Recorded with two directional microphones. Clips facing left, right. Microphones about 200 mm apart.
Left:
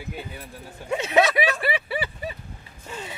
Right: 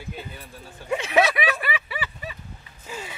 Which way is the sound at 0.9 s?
25° left (ahead or behind).